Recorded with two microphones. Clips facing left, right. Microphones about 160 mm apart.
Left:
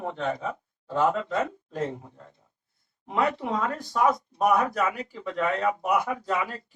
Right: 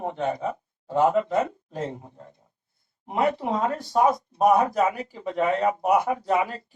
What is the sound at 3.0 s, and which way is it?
Speech, 25° right (ahead or behind).